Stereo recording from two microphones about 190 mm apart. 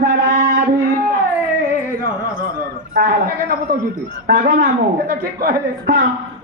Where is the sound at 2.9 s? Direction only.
50° right (ahead or behind).